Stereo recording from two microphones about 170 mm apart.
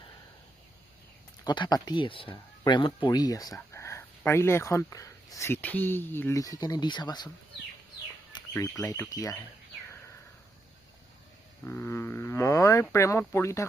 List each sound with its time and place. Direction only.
1.5 s speech: 25° left (ahead or behind)
8.3 s speech: 20° left (ahead or behind)
11.6 s speech: 15° left (ahead or behind)